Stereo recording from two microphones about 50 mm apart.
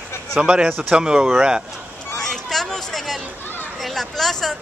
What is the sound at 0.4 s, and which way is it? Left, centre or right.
A man's voice, centre.